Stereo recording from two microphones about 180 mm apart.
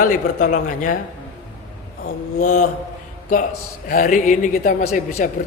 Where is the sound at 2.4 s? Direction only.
45° left (ahead or behind).